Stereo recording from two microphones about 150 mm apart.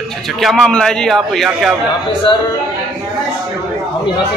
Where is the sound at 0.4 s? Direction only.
Centre (ahead or behind).